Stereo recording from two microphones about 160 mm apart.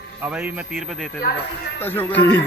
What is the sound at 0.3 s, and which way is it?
Speech, 10° right (ahead or behind).